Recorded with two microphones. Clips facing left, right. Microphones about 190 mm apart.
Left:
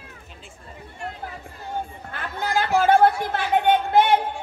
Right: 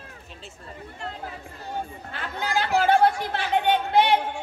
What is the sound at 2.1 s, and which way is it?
Chatter, 50° left (ahead or behind).